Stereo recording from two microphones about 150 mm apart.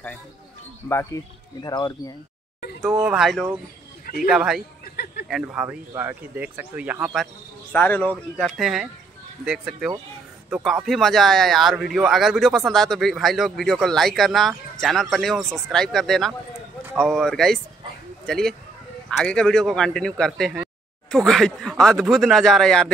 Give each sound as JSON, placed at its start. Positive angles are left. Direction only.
{"t": 0.8, "sound": "speech", "side_deg": 20}
{"t": 3.0, "sound": "a man's voice", "side_deg": -5}
{"t": 4.0, "sound": "a sound", "side_deg": 75}
{"t": 4.3, "sound": "a man's voice", "side_deg": -5}
{"t": 7.7, "sound": "a man's voice", "side_deg": 10}